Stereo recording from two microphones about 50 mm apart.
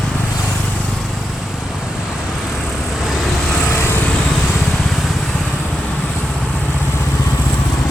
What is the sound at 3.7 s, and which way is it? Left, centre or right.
Vehicle, left.